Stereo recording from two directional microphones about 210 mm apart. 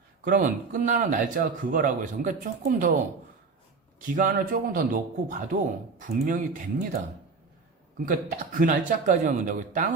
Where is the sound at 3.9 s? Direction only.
40° right (ahead or behind).